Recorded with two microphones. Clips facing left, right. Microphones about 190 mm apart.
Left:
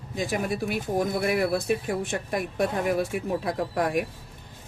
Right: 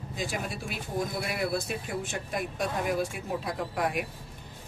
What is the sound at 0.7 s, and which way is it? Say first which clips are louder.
Speech: left 4 dB; 55° left (ahead or behind).